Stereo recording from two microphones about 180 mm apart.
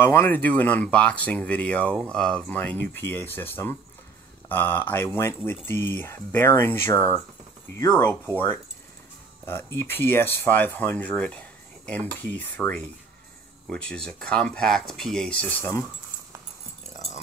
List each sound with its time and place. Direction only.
0.0 s speech: 10° left (ahead or behind)
9.5 s speech: 15° left (ahead or behind)
16.9 s dog: 40° left (ahead or behind)